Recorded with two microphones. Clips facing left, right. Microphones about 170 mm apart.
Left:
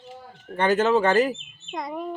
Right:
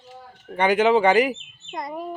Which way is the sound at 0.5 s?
15° right (ahead or behind).